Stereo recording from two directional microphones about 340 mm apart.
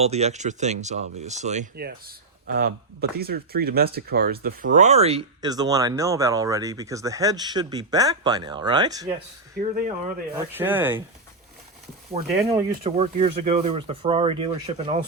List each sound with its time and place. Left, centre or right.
0.0 s speech: centre
9.6 s speech: right
10.3 s speech: centre
12.8 s speech: centre